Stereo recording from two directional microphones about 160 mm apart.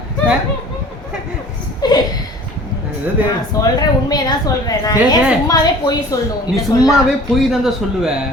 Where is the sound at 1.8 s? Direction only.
25° left (ahead or behind).